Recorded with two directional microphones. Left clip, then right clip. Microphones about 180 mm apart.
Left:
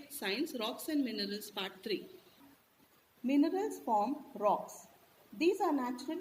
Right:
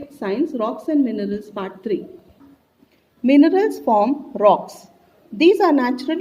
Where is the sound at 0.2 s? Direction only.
20° right (ahead or behind).